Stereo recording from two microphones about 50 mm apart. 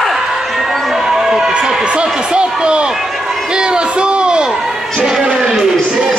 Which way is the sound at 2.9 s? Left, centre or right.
Centre.